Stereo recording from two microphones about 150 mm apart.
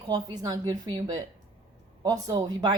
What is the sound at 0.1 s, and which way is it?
A woman's voice, 25° right (ahead or behind).